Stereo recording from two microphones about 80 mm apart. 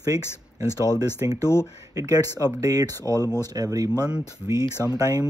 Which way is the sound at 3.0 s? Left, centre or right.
Left.